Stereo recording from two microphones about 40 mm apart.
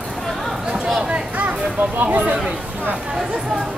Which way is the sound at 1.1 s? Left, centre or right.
Right.